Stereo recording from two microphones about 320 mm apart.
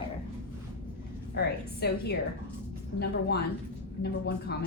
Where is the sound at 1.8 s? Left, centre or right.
Left.